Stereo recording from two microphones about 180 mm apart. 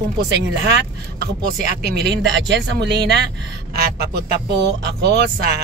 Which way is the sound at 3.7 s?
60° right (ahead or behind).